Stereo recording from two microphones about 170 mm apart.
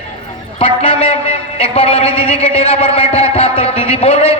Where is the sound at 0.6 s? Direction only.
30° left (ahead or behind).